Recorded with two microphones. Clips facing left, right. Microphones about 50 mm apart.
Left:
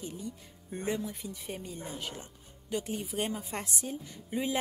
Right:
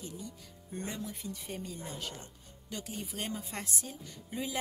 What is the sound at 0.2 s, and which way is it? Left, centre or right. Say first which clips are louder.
Speech: left 4 dB; left.